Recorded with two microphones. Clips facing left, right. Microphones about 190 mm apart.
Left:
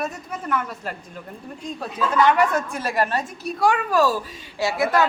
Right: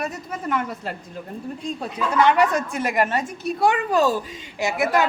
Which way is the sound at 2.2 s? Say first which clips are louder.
Even; 20° right (ahead or behind).